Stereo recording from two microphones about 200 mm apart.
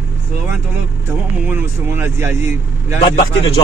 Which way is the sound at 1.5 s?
10° right (ahead or behind).